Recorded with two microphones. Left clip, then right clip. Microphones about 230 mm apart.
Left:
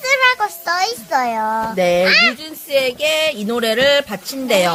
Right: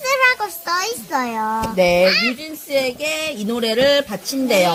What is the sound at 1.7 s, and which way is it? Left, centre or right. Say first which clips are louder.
Speech: left 1 dB; centre.